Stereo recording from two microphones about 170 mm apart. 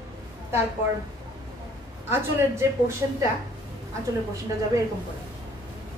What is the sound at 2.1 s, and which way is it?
Speech, 15° right (ahead or behind).